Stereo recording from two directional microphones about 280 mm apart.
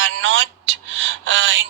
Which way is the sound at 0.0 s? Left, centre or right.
Right.